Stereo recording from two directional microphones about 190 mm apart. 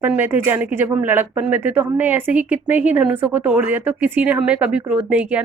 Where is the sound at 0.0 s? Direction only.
10° right (ahead or behind).